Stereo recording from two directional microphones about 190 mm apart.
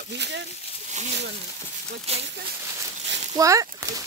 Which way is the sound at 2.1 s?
35° right (ahead or behind).